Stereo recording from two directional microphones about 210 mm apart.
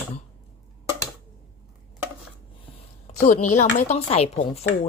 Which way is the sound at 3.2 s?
35° left (ahead or behind).